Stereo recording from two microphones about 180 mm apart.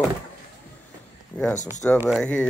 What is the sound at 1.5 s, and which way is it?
Speech, 45° left (ahead or behind).